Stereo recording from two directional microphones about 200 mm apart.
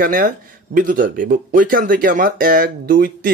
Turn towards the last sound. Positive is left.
turn(degrees=-45)  # may be behind; listen again after turning